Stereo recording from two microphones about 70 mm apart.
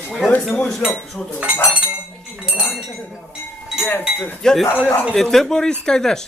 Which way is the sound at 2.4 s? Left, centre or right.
Centre.